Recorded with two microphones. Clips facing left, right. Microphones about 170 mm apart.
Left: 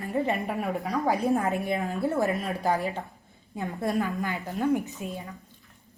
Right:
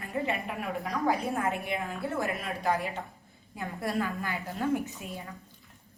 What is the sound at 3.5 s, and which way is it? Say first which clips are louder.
A woman's voice: left 4 dB; 20° left (ahead or behind).